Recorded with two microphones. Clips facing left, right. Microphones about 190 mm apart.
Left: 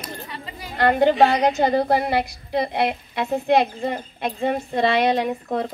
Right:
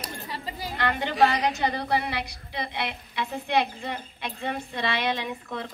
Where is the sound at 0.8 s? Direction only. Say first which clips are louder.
Left 8 dB; 45° left (ahead or behind).